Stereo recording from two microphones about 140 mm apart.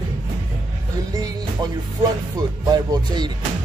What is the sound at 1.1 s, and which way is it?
Music, 25° right (ahead or behind).